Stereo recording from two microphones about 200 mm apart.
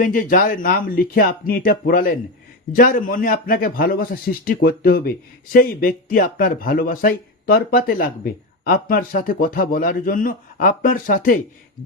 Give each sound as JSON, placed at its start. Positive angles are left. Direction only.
{"t": 0.0, "sound": "a man's voice", "side_deg": 45}